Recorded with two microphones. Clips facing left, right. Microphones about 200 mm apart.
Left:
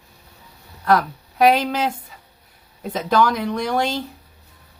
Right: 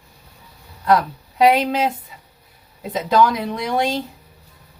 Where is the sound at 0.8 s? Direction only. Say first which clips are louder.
Right 1 dB; 20° right (ahead or behind).